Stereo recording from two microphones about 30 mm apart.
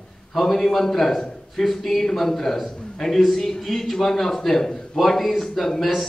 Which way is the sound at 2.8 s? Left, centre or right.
Centre.